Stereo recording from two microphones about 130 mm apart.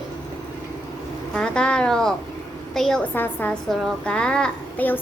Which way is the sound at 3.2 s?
15° left (ahead or behind).